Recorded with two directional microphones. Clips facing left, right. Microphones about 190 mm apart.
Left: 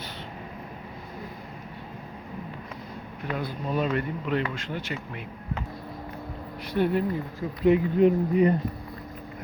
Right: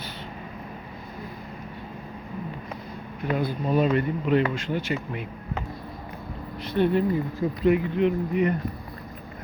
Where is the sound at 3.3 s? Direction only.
5° right (ahead or behind).